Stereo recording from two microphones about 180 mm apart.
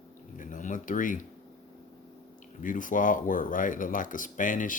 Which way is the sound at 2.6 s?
45° left (ahead or behind).